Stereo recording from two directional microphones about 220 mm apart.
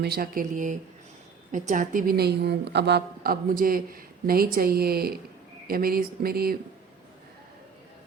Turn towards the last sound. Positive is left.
turn(degrees=-45)  # may be behind; listen again after turning